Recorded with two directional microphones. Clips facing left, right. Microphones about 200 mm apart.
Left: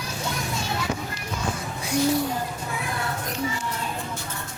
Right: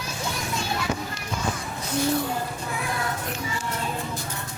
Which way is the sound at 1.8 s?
10° left (ahead or behind).